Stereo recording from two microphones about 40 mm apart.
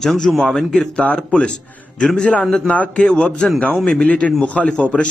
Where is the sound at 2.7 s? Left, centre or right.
Left.